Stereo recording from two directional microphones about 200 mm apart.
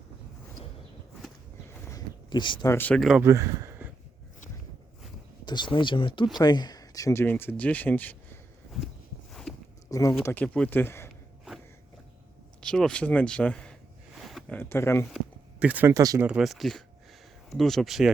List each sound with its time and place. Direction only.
1.9 s a sound: 20° left (ahead or behind)
2.7 s speech: 5° left (ahead or behind)
3.2 s speech: 15° right (ahead or behind)
5.5 s speech: 25° left (ahead or behind); by 8.9 s 5° left (ahead or behind)
9.3 s a sound: centre (ahead or behind)
9.9 s speech: 15° left (ahead or behind)
12.5 s speech: 5° left (ahead or behind)
14.2 s a sound: centre (ahead or behind)
14.6 s speech: 10° left (ahead or behind)
15.1 s speech: 5° right (ahead or behind)
16.2 s speech: 5° right (ahead or behind)